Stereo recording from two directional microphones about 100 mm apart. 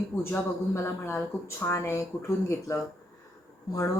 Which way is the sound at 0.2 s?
25° left (ahead or behind).